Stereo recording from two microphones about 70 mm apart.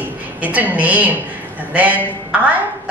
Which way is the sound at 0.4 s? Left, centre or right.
Right.